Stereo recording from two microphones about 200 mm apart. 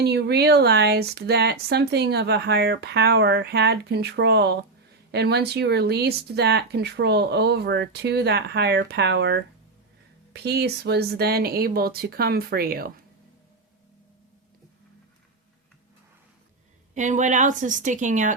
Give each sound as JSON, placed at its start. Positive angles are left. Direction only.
{"t": 0.0, "sound": "speech", "side_deg": -55}
{"t": 16.9, "sound": "a woman's voice", "side_deg": -40}